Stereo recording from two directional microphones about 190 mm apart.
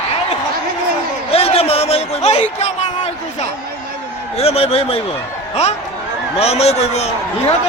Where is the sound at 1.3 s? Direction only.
30° left (ahead or behind).